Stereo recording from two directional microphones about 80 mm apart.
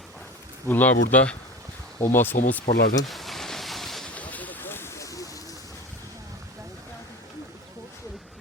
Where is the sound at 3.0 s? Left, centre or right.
Centre.